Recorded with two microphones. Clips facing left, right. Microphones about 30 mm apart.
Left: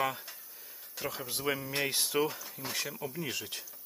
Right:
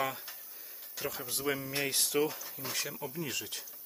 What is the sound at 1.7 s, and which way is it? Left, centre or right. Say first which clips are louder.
Speech: left 1 dB; centre.